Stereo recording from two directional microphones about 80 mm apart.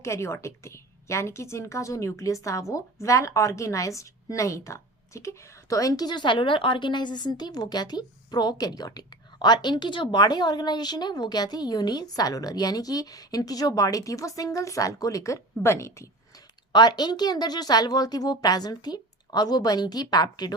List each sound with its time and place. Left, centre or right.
0.0 s a woman's voice: left
16.7 s a woman's voice: left